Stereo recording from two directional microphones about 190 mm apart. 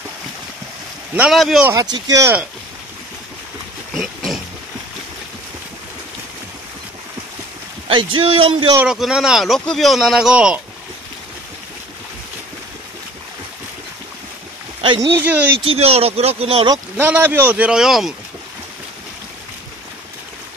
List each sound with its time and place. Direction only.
1.1 s speech: 5° right (ahead or behind)
1.7 s speech: 20° right (ahead or behind)
3.9 s pig: centre (ahead or behind)
7.9 s speech: 25° right (ahead or behind)
8.7 s speech: centre (ahead or behind)
14.8 s speech: 25° right (ahead or behind)
15.2 s speech: 10° right (ahead or behind)
15.6 s speech: 30° right (ahead or behind)
16.7 s speech: 10° right (ahead or behind)